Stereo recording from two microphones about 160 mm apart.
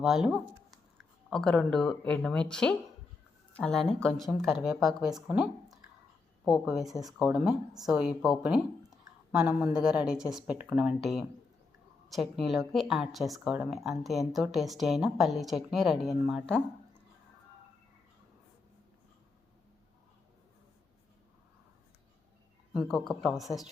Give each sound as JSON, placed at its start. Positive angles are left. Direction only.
{"t": 0.0, "sound": "speech", "side_deg": 0}
{"t": 22.7, "sound": "speech", "side_deg": 0}